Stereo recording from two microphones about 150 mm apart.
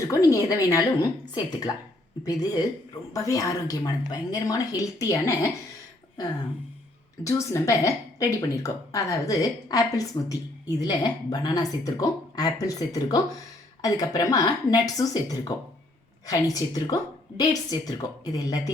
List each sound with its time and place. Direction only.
0.1 s speech: 20° left (ahead or behind)
7.3 s speech: 20° left (ahead or behind)